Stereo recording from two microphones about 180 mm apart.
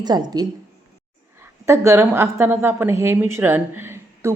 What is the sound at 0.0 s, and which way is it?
A woman's voice, 20° right (ahead or behind).